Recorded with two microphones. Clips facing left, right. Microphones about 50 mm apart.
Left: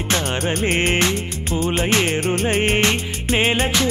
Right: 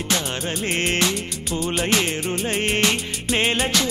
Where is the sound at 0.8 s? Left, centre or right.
Left.